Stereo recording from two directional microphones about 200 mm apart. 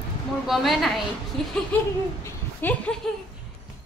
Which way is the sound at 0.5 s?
Centre (ahead or behind).